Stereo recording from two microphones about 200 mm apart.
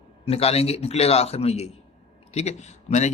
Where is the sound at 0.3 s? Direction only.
30° left (ahead or behind).